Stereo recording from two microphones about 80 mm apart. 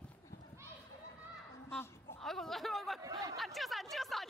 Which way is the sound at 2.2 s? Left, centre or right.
Centre.